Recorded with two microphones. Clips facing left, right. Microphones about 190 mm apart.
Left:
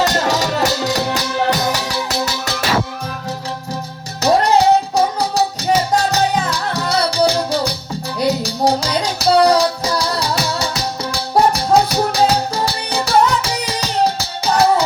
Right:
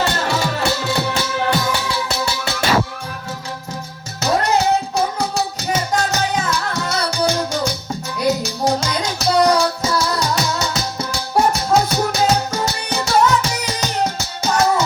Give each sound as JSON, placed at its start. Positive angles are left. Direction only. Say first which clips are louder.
{"t": 0.0, "sound": "music", "louder": "left 3 dB", "side_deg": 40}
{"t": 4.2, "sound": "music", "louder": "left 4 dB", "side_deg": 35}